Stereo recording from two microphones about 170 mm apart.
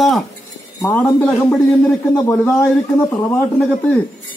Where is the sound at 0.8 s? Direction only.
10° left (ahead or behind).